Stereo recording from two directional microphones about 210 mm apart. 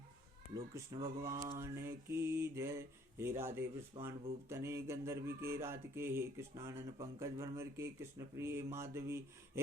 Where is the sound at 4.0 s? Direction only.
25° right (ahead or behind).